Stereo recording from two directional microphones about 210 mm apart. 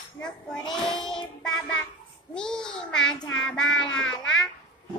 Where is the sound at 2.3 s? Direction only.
5° left (ahead or behind).